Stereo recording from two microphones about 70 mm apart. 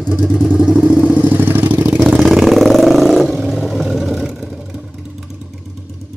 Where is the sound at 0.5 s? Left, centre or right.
Centre.